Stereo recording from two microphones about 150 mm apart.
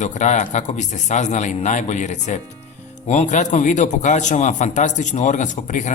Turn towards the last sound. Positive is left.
turn(degrees=55)  # may be behind; listen again after turning